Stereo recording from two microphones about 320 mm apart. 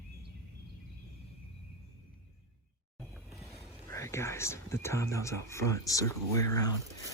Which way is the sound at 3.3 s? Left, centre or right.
Centre.